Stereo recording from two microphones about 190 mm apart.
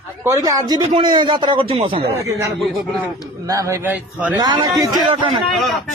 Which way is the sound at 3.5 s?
15° right (ahead or behind).